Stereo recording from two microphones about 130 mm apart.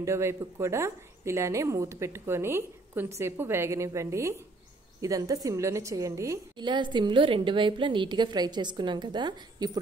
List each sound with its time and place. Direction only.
0.0 s a woman's voice: 20° right (ahead or behind)
6.6 s a woman's voice: 35° right (ahead or behind)